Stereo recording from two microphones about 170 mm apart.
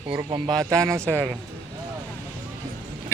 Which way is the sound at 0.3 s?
25° right (ahead or behind).